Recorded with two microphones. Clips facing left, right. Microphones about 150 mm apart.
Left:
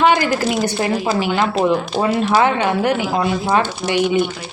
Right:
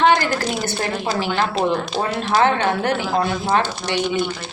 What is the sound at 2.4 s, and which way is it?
Speech, 10° left (ahead or behind).